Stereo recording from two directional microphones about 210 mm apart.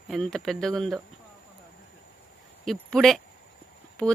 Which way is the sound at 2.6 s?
Centre (ahead or behind).